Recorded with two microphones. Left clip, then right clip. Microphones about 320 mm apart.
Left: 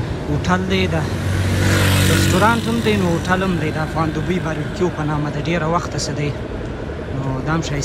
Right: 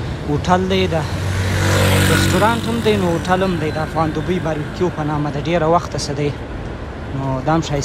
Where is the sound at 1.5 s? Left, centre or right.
Right.